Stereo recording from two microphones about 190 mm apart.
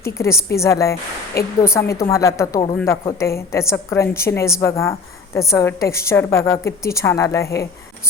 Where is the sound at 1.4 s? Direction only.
55° left (ahead or behind).